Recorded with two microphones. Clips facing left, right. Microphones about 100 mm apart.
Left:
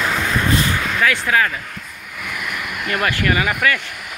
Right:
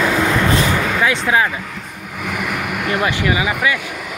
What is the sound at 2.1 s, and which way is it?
Vehicle, 85° right.